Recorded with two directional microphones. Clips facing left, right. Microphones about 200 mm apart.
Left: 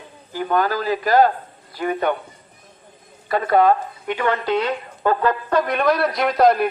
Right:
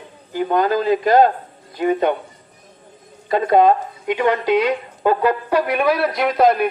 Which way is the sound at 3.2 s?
20° right (ahead or behind).